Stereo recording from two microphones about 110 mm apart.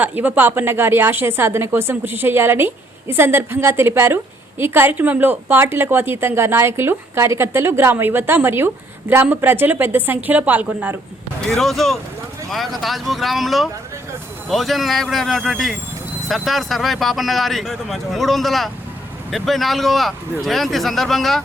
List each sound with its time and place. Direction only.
0.0 s a woman's voice: 15° right (ahead or behind)
11.4 s speech: centre (ahead or behind)